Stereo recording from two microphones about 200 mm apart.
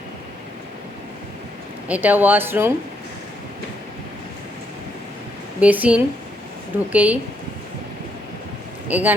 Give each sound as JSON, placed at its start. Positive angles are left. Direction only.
{"t": 1.9, "sound": "speech", "side_deg": -10}
{"t": 5.5, "sound": "speech", "side_deg": -5}
{"t": 8.9, "sound": "speech", "side_deg": -10}